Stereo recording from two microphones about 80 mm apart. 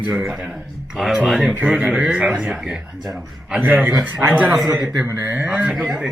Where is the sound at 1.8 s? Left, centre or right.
Centre.